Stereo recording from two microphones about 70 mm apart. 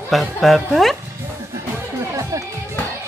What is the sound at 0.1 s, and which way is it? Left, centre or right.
Speech, centre.